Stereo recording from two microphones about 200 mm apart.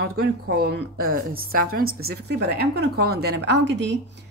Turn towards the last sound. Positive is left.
turn(degrees=-60)  # may be behind; listen again after turning